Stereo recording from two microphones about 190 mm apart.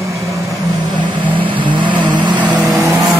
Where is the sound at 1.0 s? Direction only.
25° right (ahead or behind).